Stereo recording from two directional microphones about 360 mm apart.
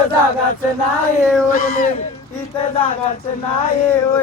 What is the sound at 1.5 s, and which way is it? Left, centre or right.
Speech, centre.